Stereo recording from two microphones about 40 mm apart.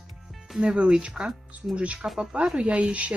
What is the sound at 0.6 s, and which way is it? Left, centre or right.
Speech, right.